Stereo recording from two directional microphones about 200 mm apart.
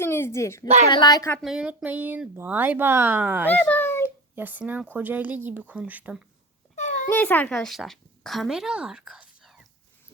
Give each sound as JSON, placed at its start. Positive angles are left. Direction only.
{"t": 0.0, "sound": "a sound", "side_deg": 10}
{"t": 0.9, "sound": "speech", "side_deg": 20}
{"t": 1.4, "sound": "speech", "side_deg": -5}
{"t": 3.5, "sound": "a child's voice", "side_deg": 10}
{"t": 4.0, "sound": "speech", "side_deg": -10}
{"t": 6.7, "sound": "a sound", "side_deg": 40}
{"t": 7.1, "sound": "a woman's voice", "side_deg": 10}